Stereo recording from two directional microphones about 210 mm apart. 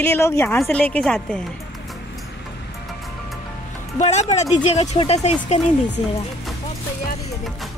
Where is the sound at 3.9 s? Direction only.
30° left (ahead or behind).